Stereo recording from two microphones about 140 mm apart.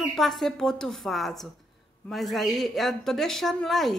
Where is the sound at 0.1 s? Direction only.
Centre (ahead or behind).